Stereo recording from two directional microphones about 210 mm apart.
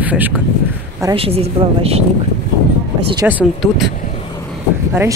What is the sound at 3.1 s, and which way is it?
Speech, 10° right (ahead or behind).